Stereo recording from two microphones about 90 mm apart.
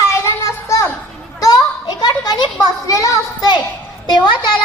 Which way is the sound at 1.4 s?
45° left (ahead or behind).